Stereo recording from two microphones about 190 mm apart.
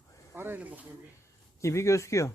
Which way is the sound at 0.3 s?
10° right (ahead or behind).